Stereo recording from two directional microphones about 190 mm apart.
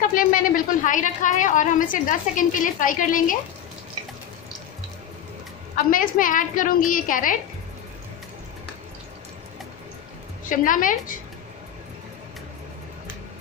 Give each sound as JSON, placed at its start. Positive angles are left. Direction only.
{"t": 0.1, "sound": "a woman's voice", "side_deg": 45}
{"t": 5.9, "sound": "a woman's voice", "side_deg": 45}
{"t": 10.4, "sound": "a woman's voice", "side_deg": 45}